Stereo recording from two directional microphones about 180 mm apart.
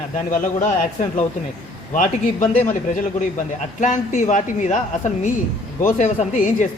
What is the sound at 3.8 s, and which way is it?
Speech, 45° left (ahead or behind).